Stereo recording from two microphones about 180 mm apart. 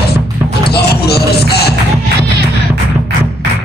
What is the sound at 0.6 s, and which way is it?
Music, 60° left (ahead or behind).